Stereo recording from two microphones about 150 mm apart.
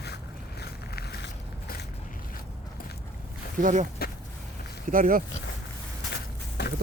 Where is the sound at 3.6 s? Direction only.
60° right (ahead or behind).